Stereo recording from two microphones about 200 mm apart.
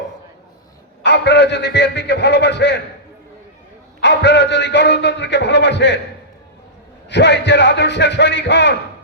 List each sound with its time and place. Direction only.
1.0 s a man's voice: 60° left (ahead or behind)
4.0 s a man's voice: 60° left (ahead or behind)
7.1 s a man's voice: 60° left (ahead or behind)